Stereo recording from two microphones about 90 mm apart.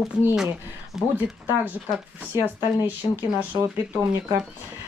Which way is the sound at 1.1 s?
20° right (ahead or behind).